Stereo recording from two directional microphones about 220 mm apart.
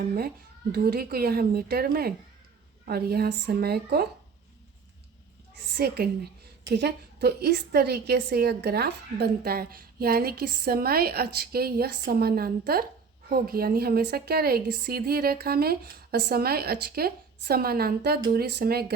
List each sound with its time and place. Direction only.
0.7 s a woman's voice: 45° right (ahead or behind)
5.7 s a woman's voice: 45° right (ahead or behind)